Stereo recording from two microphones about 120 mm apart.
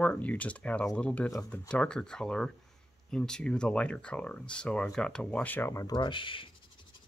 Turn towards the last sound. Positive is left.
turn(degrees=45)  # may be behind; listen again after turning